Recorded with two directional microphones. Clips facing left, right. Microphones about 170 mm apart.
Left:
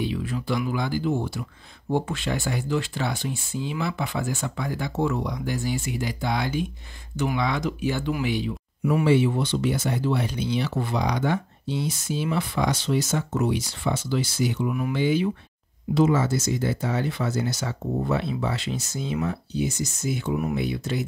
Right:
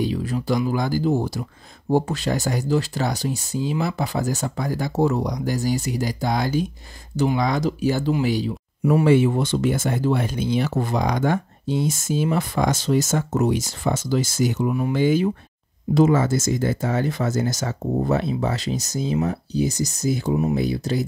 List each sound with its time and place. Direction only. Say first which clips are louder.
0.0 s speech: right 4 dB; 40° right (ahead or behind)
9.0 s speech: right 3 dB; 50° right (ahead or behind)